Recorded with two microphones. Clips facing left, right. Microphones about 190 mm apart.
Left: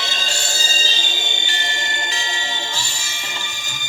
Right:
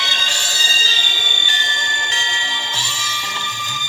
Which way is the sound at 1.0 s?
40° left (ahead or behind).